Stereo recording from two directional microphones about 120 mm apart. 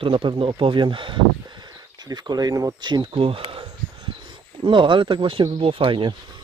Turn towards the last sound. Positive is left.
turn(degrees=-45)  # may be behind; listen again after turning